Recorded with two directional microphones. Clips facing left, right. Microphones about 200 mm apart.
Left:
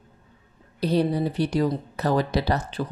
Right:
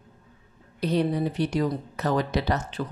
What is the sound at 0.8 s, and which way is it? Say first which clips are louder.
Speech: left 2 dB; 35° left (ahead or behind).